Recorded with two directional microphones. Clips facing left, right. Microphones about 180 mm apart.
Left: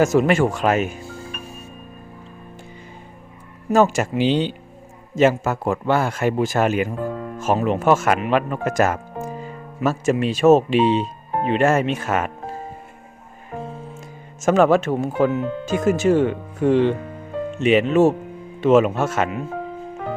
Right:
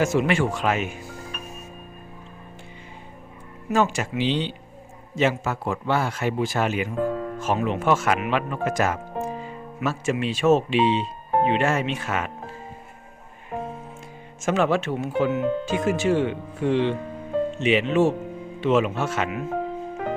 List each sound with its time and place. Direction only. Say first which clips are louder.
0.0 s speech: left 5 dB; 40° left (ahead or behind)
1.0 s music: left 3 dB; 30° left (ahead or behind)
3.7 s speech: left 6 dB; 40° left (ahead or behind)
14.4 s speech: left 6 dB; 45° left (ahead or behind)